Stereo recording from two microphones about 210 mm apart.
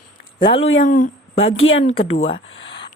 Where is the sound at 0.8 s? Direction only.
35° left (ahead or behind).